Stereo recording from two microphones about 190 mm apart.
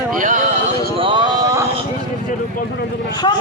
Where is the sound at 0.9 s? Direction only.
30° right (ahead or behind).